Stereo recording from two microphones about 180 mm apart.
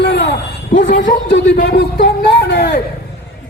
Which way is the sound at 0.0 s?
65° left (ahead or behind).